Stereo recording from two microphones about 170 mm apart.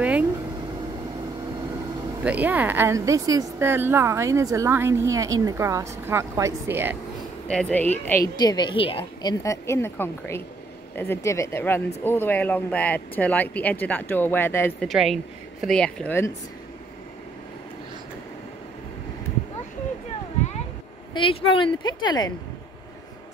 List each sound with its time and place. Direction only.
0.0 s vehicle: 10° right (ahead or behind)
2.2 s speech: 10° right (ahead or behind)
7.4 s speech: 5° left (ahead or behind)
8.4 s a woman's voice: 25° left (ahead or behind)
14.8 s speech: centre (ahead or behind)
21.1 s a woman's voice: 30° left (ahead or behind)